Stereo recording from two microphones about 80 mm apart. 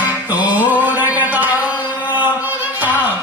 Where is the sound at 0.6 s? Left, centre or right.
Right.